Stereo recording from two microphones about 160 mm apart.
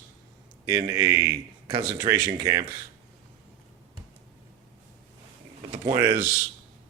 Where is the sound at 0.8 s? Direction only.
20° right (ahead or behind).